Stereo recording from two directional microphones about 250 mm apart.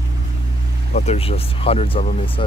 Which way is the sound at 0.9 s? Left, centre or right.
Left.